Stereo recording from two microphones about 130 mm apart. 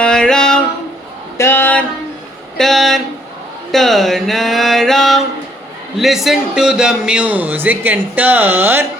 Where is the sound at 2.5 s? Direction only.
Centre (ahead or behind).